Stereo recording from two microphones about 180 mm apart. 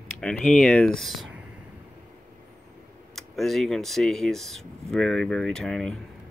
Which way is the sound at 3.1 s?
Centre (ahead or behind).